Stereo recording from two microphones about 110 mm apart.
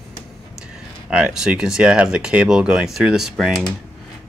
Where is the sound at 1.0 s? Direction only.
10° right (ahead or behind).